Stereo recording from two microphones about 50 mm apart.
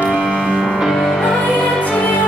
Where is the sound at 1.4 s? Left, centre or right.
Left.